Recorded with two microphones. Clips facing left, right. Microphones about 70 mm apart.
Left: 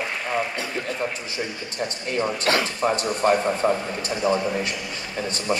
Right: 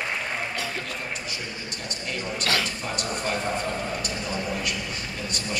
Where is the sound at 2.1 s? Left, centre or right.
Left.